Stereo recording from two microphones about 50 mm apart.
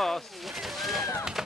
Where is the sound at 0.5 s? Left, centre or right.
Centre.